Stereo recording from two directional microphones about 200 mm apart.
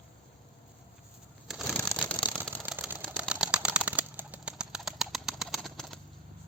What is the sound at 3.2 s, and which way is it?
Bird, 5° right (ahead or behind).